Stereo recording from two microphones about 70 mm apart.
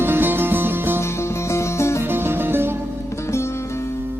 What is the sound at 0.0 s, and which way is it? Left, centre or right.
Music, right.